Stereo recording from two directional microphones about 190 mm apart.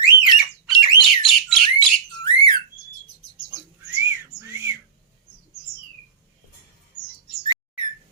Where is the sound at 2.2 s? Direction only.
25° left (ahead or behind).